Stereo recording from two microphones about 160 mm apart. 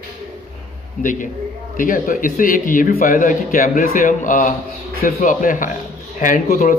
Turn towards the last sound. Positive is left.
turn(degrees=60)  # may be behind; listen again after turning